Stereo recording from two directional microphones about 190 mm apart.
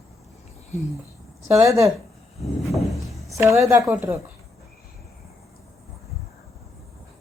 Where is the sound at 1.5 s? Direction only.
15° right (ahead or behind).